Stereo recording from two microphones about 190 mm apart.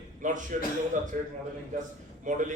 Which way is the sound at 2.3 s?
40° right (ahead or behind).